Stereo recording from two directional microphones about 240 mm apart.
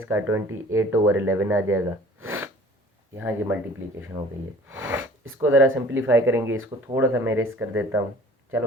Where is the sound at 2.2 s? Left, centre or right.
Right.